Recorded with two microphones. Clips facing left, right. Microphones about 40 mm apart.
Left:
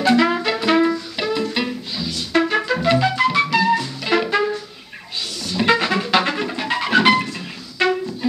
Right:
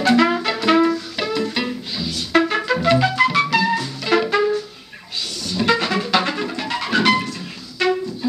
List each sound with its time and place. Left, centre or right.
0.1 s music: centre
5.6 s music: centre